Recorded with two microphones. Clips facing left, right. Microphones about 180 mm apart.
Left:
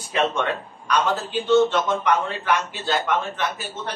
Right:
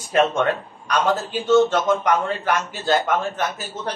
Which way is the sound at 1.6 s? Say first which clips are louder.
Right 2 dB; 45° right (ahead or behind).